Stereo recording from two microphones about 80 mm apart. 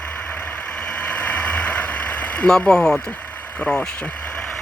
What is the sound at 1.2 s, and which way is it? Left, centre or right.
Vehicle, centre.